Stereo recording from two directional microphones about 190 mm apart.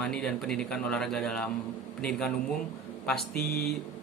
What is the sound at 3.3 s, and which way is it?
Speech, 55° left (ahead or behind).